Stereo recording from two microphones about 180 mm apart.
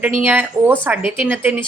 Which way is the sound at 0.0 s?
10° right (ahead or behind).